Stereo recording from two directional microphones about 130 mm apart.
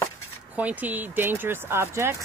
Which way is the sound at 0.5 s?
10° right (ahead or behind).